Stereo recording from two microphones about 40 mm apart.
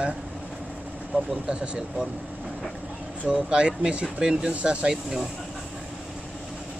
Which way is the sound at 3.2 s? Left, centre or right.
Right.